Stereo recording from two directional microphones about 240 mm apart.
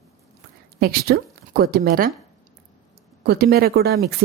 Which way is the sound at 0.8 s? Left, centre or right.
Right.